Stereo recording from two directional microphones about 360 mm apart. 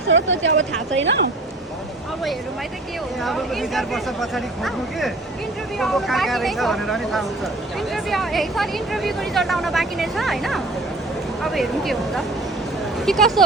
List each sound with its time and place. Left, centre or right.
0.1 s speech: right
3.2 s speech: centre